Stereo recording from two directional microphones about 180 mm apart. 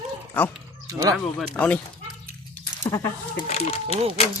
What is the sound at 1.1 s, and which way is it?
Speech, 5° left (ahead or behind).